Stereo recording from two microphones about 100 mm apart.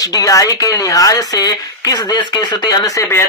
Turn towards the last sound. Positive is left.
turn(degrees=45)  # may be behind; listen again after turning